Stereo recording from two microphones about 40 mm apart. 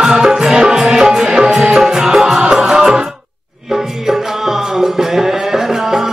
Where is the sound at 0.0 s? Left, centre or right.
Centre.